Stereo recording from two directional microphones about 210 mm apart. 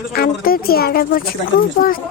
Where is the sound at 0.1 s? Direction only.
45° left (ahead or behind).